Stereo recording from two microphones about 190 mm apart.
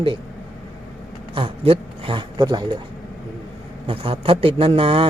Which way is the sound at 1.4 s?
30° right (ahead or behind).